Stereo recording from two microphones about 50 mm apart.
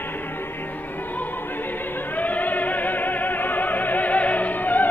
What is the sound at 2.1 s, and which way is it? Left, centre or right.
Music, left.